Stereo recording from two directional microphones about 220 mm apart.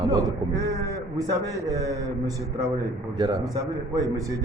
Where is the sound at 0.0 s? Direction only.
15° right (ahead or behind).